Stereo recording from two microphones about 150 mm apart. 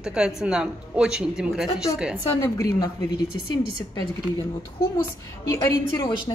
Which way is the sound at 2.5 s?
20° left (ahead or behind).